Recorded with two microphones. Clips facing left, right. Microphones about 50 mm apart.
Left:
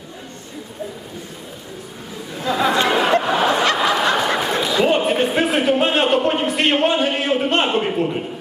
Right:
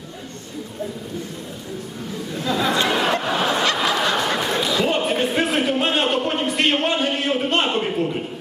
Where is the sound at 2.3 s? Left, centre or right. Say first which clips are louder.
Left 3 dB; centre.